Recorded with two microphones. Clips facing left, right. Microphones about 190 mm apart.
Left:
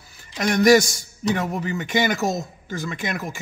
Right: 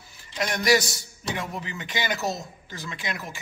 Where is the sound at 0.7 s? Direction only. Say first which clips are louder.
Left 7 dB; 45° left (ahead or behind).